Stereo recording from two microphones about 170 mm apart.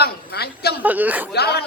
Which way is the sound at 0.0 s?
70° left (ahead or behind).